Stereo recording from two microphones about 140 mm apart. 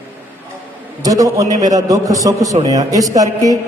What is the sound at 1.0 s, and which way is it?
A man's voice, 25° right (ahead or behind).